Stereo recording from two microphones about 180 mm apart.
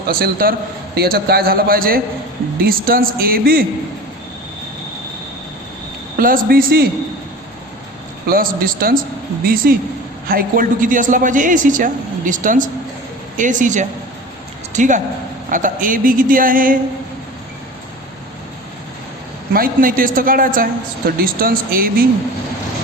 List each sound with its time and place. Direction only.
0.1 s a man's voice: 55° right (ahead or behind)
6.1 s a man's voice: 55° right (ahead or behind)
8.3 s speech: 50° right (ahead or behind)
19.5 s speech: 50° right (ahead or behind)